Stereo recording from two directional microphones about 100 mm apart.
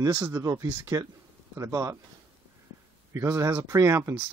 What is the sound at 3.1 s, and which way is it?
Speech, 30° right (ahead or behind).